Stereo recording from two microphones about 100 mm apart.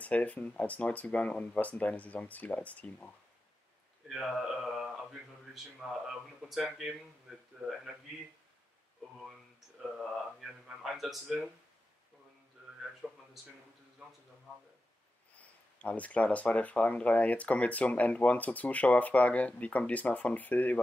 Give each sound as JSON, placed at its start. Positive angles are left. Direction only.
{"t": 0.0, "sound": "speech", "side_deg": 15}
{"t": 4.1, "sound": "a man's voice", "side_deg": 0}
{"t": 7.6, "sound": "speech", "side_deg": -15}
{"t": 9.9, "sound": "speech", "side_deg": -5}
{"t": 13.0, "sound": "a sound", "side_deg": -10}
{"t": 15.3, "sound": "speech", "side_deg": 15}